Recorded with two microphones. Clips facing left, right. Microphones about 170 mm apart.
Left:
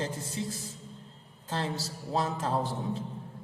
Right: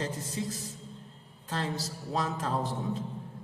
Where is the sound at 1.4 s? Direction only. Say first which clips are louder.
Even; 30° left (ahead or behind).